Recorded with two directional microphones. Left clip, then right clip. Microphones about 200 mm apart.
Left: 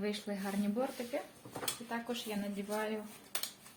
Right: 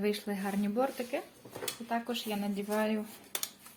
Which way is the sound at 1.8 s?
60° right (ahead or behind).